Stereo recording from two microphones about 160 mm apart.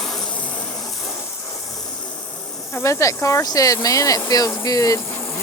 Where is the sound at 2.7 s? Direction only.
20° left (ahead or behind).